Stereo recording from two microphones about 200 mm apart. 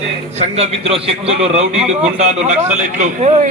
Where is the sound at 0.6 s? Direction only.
30° right (ahead or behind).